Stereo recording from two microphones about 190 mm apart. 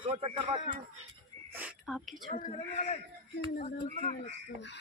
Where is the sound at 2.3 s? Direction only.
40° left (ahead or behind).